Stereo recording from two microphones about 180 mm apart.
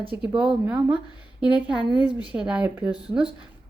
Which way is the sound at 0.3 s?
5° right (ahead or behind).